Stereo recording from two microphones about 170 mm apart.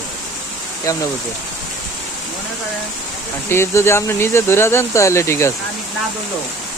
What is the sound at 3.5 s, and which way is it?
Speech, 15° left (ahead or behind).